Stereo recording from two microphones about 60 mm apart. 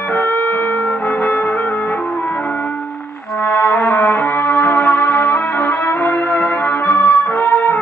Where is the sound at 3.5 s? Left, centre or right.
Left.